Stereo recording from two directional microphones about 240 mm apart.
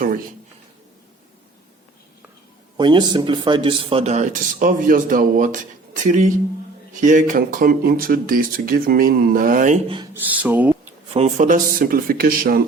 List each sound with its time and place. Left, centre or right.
0.0 s a sound: right
2.7 s speech: centre; by 9.7 s right
10.2 s speech: centre
11.1 s speech: right